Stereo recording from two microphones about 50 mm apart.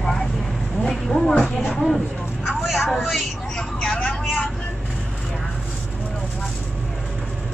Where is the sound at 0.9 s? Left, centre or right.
Centre.